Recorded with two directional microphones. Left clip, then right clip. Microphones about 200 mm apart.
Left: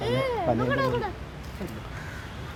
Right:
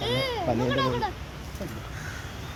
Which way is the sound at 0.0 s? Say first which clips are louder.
Left 1 dB; 35° left (ahead or behind).